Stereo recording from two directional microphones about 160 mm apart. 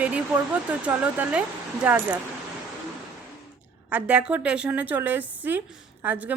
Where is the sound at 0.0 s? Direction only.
10° right (ahead or behind).